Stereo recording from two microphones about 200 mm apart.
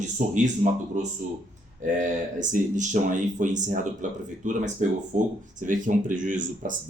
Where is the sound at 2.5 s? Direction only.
40° right (ahead or behind).